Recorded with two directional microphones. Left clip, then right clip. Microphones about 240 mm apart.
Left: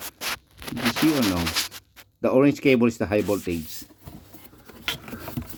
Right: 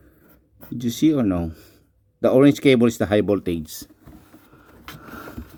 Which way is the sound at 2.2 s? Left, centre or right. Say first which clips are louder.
Right 4 dB; right.